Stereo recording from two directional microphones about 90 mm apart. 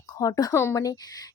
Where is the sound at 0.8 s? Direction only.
45° left (ahead or behind).